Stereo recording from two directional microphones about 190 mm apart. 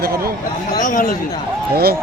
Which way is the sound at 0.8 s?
45° left (ahead or behind).